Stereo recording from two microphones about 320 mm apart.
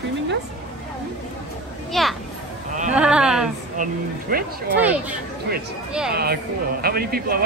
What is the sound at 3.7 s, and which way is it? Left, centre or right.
Speech, right.